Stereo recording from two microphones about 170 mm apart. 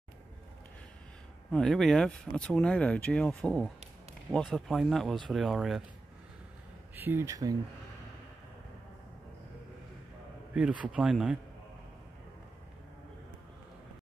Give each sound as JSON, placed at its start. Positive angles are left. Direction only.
{"t": 1.5, "sound": "speech", "side_deg": 5}
{"t": 7.0, "sound": "speech", "side_deg": -15}
{"t": 10.5, "sound": "speech", "side_deg": -5}